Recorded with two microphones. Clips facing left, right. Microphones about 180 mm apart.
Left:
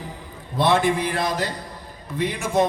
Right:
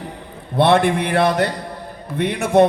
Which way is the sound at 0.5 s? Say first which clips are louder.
Right 5 dB; 60° right (ahead or behind).